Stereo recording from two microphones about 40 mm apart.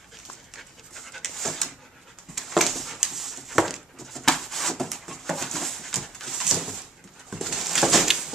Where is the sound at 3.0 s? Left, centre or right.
Centre.